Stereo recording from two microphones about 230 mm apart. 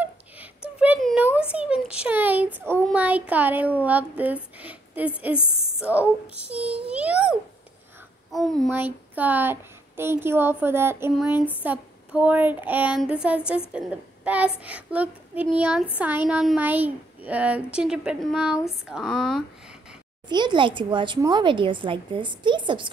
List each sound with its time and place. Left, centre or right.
0.7 s a sound: centre
5.8 s a child's voice: centre
20.2 s speech: centre